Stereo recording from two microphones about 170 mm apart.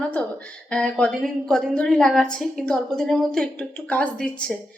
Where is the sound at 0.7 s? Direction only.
5° left (ahead or behind).